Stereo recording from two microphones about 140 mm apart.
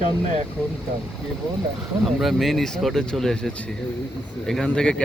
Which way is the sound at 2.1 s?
Centre (ahead or behind).